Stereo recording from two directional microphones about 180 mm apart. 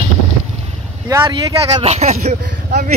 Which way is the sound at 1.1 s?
20° right (ahead or behind).